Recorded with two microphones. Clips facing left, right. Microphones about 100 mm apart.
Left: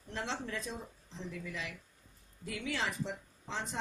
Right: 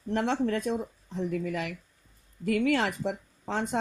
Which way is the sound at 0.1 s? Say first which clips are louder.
Right 12 dB; 60° right (ahead or behind).